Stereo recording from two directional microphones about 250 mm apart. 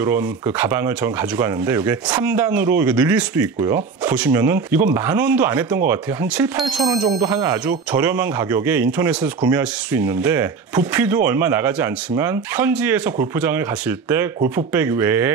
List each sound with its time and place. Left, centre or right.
0.0 s speech: centre
14.7 s speech: centre